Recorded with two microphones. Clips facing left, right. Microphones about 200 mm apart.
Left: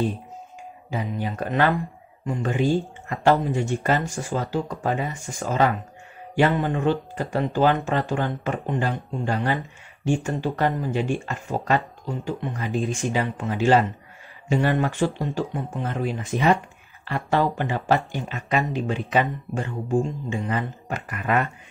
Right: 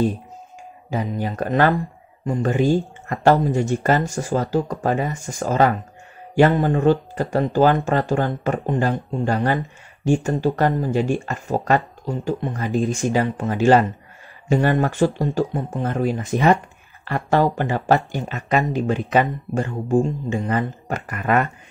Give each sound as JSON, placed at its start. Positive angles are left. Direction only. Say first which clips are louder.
{"t": 0.8, "sound": "speech", "louder": "right 4 dB", "side_deg": -40}
{"t": 13.1, "sound": "speech", "louder": "right 5 dB", "side_deg": -40}